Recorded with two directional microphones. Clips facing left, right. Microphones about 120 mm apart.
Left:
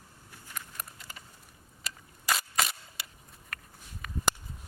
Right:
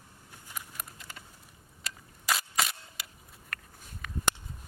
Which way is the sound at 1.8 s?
Centre (ahead or behind).